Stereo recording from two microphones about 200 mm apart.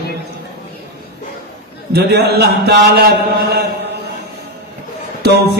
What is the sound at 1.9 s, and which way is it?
A man's voice, 55° right (ahead or behind).